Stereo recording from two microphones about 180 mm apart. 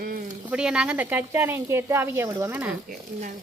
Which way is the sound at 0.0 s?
55° right (ahead or behind).